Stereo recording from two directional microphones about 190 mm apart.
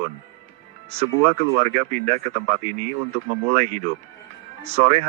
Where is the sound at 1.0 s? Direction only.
35° right (ahead or behind).